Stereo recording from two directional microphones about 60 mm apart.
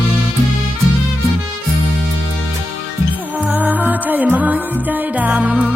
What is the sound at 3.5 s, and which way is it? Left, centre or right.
Music, right.